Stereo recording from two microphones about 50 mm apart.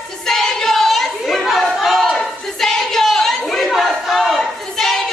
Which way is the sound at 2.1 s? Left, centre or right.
Centre.